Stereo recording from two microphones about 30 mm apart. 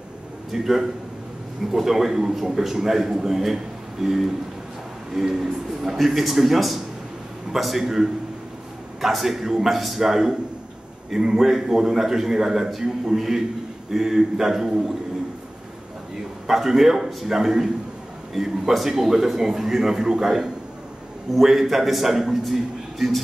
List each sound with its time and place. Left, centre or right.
0.5 s a man's voice: centre
5.9 s a man's voice: centre
16.4 s a man's voice: centre